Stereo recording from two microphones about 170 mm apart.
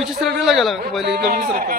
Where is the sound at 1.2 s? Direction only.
60° right (ahead or behind).